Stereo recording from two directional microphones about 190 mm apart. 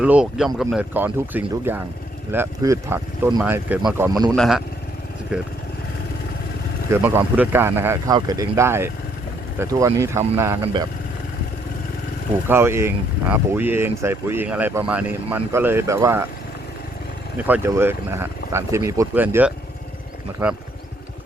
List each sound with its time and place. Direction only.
0.0 s speech: 5° right (ahead or behind)
4.3 s speech: centre (ahead or behind)
6.9 s speech: 15° right (ahead or behind)
12.5 s speech: 15° right (ahead or behind)
17.3 s speech: 10° right (ahead or behind)